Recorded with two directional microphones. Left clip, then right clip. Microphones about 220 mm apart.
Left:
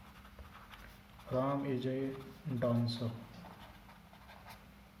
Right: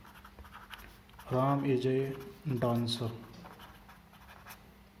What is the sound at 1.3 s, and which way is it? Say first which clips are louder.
Speech: right 5 dB; 50° right (ahead or behind).